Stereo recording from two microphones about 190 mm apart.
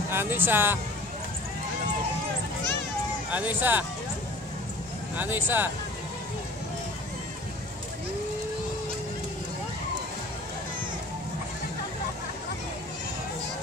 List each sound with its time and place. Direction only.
0.1 s speech: 10° right (ahead or behind)
3.3 s speech: 10° right (ahead or behind)
5.1 s speech: 10° right (ahead or behind)